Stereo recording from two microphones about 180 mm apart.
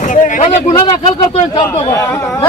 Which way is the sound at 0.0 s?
45° left (ahead or behind).